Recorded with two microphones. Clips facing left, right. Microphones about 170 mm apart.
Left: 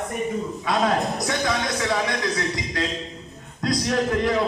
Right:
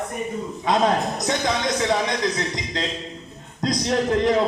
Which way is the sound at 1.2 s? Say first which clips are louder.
Right 2 dB; 20° right (ahead or behind).